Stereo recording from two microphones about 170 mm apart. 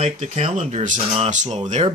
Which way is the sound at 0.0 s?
45° right (ahead or behind).